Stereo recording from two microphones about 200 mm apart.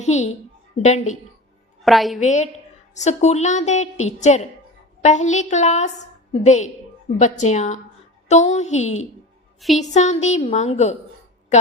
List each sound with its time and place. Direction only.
0.0 s a woman's voice: 35° left (ahead or behind)
1.8 s a woman's voice: centre (ahead or behind)
2.2 s a woman's voice: 35° left (ahead or behind)
9.6 s a woman's voice: centre (ahead or behind)
9.9 s a woman's voice: 35° left (ahead or behind)